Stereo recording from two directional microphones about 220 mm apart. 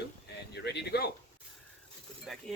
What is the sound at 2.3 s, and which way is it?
Speech, centre (ahead or behind).